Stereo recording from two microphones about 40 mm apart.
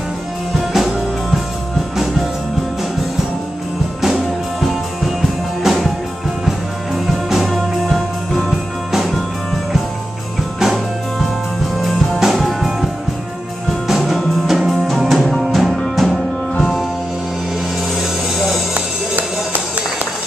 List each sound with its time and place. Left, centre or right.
0.7 s music: centre
4.0 s music: centre
7.2 s music: centre
8.5 s music: centre
10.6 s music: centre
15.8 s music: centre